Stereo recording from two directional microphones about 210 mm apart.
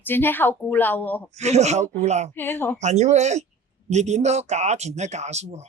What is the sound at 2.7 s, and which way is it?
Speech, 35° right (ahead or behind).